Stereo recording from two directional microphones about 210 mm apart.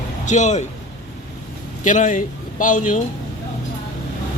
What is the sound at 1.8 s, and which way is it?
Speech, 35° left (ahead or behind).